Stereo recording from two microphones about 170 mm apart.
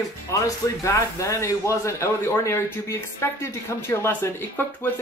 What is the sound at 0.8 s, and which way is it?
Speech, 15° left (ahead or behind).